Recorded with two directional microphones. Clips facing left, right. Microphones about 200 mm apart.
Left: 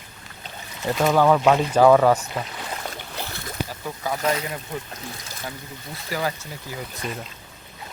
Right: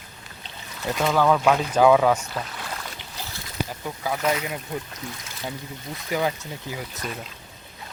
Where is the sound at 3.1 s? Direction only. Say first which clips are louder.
Left 5 dB; 60° left (ahead or behind).